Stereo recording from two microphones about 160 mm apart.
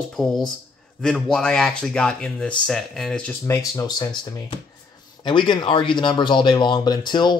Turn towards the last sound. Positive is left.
turn(degrees=30)  # may be behind; listen again after turning